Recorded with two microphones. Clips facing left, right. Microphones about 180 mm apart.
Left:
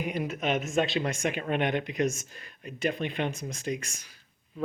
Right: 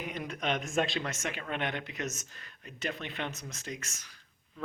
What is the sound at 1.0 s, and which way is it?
Speech, 15° left (ahead or behind).